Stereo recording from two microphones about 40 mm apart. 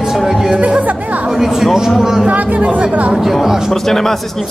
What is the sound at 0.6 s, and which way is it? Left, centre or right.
Music, right.